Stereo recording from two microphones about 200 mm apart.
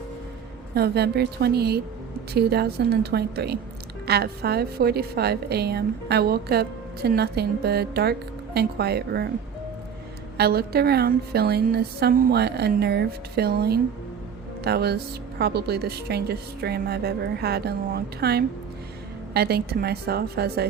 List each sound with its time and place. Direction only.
0.7 s a woman's voice: 55° right (ahead or behind)
10.3 s a woman's voice: 50° right (ahead or behind)